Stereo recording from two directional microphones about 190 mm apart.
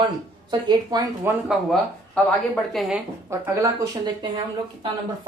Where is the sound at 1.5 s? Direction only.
Centre (ahead or behind).